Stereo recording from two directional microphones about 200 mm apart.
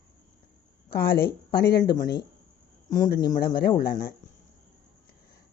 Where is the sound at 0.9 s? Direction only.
50° left (ahead or behind).